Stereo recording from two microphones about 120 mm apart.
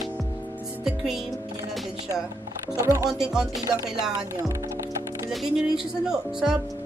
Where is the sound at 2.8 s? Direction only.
25° right (ahead or behind).